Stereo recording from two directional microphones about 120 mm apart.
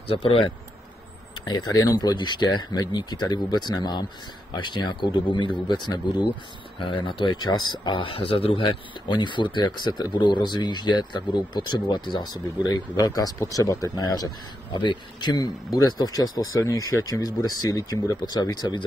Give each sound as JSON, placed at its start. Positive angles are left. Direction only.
{"t": 0.1, "sound": "speech", "side_deg": 50}
{"t": 1.4, "sound": "speech", "side_deg": 35}